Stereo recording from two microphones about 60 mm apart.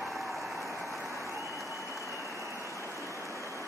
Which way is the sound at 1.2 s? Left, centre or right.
Right.